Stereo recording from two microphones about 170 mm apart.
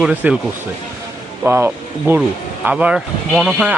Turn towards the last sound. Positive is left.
turn(degrees=0)  # may be behind; listen again after turning